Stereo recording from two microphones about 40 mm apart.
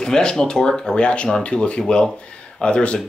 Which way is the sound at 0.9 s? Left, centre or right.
Left.